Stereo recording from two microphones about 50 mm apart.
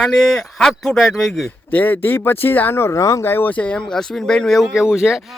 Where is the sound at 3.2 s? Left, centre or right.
Left.